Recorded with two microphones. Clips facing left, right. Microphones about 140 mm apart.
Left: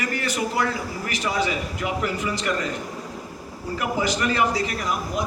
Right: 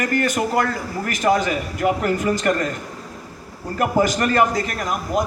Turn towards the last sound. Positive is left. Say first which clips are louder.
# right 4 dB
turn(degrees=-50)  # may be behind; listen again after turning